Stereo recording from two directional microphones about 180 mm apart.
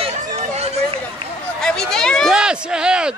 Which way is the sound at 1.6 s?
5° left (ahead or behind).